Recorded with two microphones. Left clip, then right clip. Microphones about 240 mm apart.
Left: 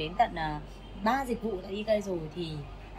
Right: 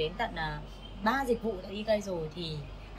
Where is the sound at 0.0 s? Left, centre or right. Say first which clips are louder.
Left 4 dB; centre.